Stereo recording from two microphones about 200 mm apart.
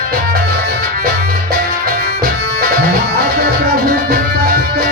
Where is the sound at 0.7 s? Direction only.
50° right (ahead or behind).